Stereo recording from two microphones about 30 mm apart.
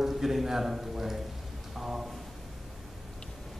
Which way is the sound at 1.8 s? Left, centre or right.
Centre.